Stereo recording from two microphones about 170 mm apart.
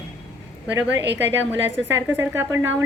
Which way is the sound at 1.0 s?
90° right.